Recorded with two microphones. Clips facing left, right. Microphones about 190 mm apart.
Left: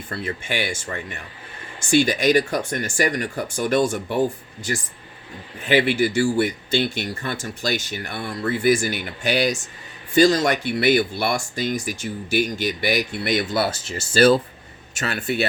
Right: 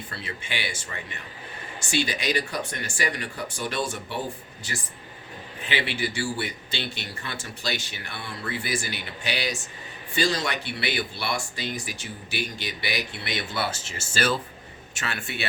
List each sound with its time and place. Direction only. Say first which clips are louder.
0.1 s speech: left 10 dB; 45° left (ahead or behind)